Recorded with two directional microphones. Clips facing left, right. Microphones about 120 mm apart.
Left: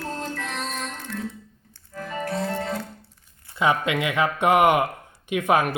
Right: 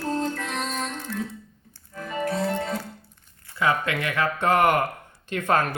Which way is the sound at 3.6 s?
20° left (ahead or behind).